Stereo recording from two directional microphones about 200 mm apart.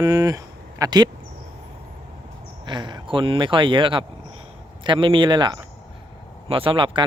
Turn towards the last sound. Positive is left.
turn(degrees=-25)  # may be behind; listen again after turning